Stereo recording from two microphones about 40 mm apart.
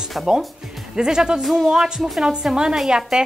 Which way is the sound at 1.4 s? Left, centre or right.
Centre.